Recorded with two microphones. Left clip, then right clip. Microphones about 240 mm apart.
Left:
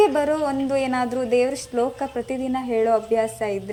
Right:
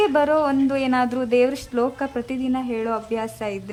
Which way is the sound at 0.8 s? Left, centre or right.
Centre.